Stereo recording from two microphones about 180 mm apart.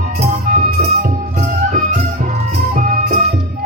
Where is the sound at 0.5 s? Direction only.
55° right (ahead or behind).